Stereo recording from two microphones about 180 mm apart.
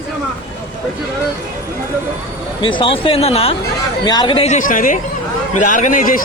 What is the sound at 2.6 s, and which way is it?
Speech, 30° left (ahead or behind).